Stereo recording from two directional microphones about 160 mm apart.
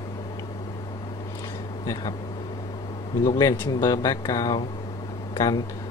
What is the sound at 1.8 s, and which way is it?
Speech, 20° left (ahead or behind).